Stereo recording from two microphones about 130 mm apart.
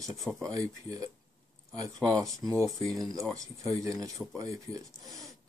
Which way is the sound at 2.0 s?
5° left (ahead or behind).